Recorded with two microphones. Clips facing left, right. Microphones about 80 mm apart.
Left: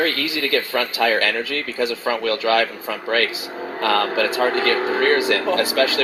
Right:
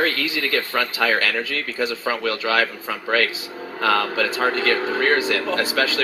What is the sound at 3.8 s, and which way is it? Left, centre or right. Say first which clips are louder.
Speech: left 1 dB; left.